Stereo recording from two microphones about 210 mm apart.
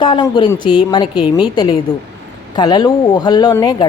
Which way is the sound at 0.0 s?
20° left (ahead or behind).